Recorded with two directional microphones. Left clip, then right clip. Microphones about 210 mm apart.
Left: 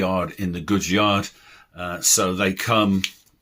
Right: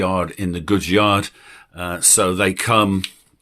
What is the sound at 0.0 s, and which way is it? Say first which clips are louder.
Speech: right 3 dB; 35° right (ahead or behind).